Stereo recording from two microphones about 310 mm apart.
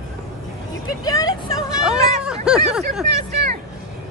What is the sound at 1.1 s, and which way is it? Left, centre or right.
Speech, centre.